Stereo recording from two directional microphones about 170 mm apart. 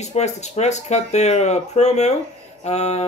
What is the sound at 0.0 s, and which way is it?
Speech, 40° left (ahead or behind).